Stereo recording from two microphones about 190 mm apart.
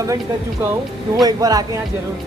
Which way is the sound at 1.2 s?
20° right (ahead or behind).